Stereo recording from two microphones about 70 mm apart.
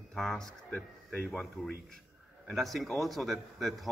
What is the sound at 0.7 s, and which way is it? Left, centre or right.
A man's voice, centre.